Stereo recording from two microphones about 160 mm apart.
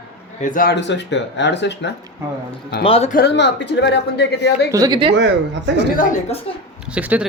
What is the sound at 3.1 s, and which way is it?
Speech, 90° left.